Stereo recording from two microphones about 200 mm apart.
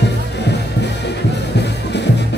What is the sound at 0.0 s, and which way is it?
Music, 60° left (ahead or behind).